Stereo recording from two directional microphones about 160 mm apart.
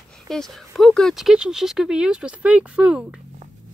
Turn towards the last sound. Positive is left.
turn(degrees=-5)  # may be behind; listen again after turning